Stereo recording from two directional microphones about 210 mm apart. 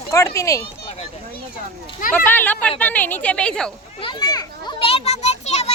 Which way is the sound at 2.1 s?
10° left (ahead or behind).